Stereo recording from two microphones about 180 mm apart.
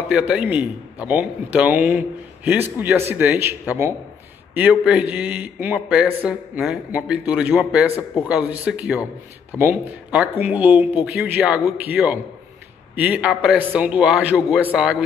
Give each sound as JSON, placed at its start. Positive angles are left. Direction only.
{"t": 0.1, "sound": "a man's voice", "side_deg": -5}
{"t": 7.9, "sound": "a man's voice", "side_deg": 15}
{"t": 8.3, "sound": "a man's voice", "side_deg": -5}